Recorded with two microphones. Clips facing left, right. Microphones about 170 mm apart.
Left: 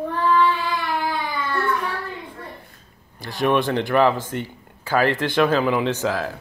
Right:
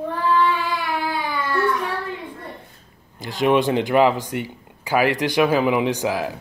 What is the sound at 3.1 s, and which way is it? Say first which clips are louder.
Speech: right 2 dB; 20° right (ahead or behind).